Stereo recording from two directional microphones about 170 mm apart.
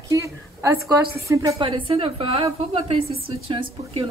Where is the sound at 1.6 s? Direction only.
35° right (ahead or behind).